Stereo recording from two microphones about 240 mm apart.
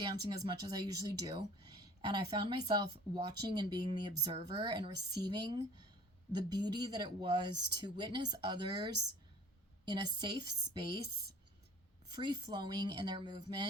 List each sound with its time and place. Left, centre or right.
0.0 s speech: centre
12.1 s speech: centre